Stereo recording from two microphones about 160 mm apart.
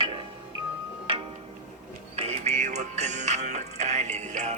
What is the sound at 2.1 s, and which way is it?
Music, 40° right (ahead or behind).